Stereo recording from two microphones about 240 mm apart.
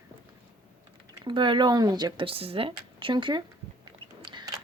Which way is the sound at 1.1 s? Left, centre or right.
Centre.